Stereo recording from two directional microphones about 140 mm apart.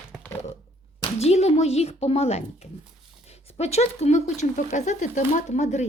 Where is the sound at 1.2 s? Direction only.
50° left (ahead or behind).